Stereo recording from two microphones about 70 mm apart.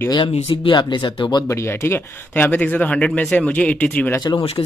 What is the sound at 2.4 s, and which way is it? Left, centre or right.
Speech, left.